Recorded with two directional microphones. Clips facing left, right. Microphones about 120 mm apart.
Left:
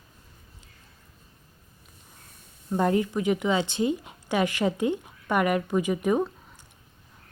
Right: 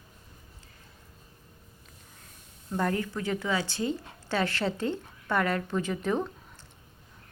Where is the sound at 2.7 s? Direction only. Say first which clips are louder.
Left 6 dB; 20° left (ahead or behind).